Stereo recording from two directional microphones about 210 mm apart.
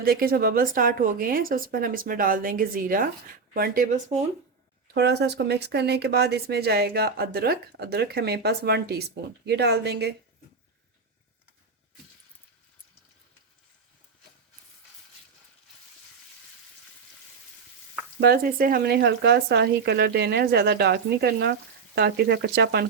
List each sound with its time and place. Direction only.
0.0 s speech: 45° right (ahead or behind)
4.9 s speech: 50° right (ahead or behind)
18.2 s speech: 45° right (ahead or behind)